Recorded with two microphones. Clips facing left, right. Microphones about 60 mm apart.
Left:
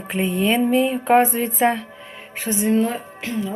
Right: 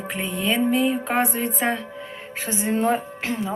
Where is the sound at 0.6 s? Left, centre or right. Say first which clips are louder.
Left 2 dB; centre.